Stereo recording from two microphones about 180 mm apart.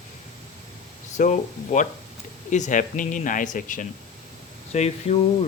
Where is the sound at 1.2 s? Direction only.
45° left (ahead or behind).